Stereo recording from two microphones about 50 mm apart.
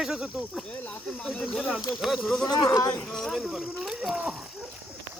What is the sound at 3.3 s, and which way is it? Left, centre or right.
Speech, centre.